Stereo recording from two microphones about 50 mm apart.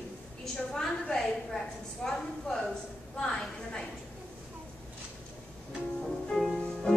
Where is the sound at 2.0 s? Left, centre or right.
Centre.